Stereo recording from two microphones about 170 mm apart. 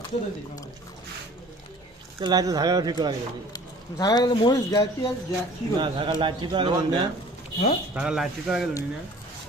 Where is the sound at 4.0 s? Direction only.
25° left (ahead or behind).